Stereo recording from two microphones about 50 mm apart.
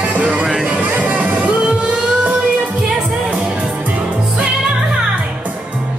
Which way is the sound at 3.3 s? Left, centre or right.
Right.